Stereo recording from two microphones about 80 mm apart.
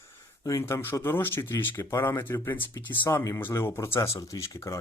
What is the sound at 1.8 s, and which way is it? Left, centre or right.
Speech, left.